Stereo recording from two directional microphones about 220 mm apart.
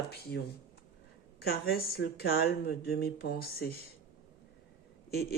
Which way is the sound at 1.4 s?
45° left (ahead or behind).